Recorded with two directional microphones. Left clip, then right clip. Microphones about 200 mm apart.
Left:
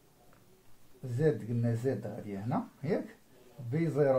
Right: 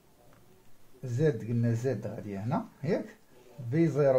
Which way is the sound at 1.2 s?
35° right (ahead or behind).